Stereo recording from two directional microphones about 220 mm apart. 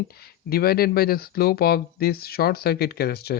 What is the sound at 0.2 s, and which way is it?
Speech, 45° left (ahead or behind).